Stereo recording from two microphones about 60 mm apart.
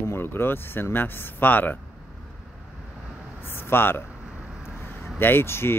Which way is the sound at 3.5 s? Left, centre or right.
Left.